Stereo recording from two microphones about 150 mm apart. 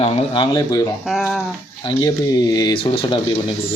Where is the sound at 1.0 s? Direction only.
Centre (ahead or behind).